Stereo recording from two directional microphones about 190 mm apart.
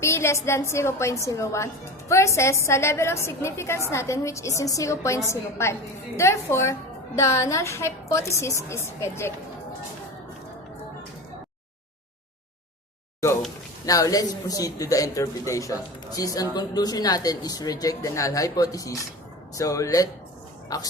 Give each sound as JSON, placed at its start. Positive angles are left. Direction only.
{"t": 0.0, "sound": "a woman's voice", "side_deg": 15}
{"t": 13.8, "sound": "a woman's voice", "side_deg": 20}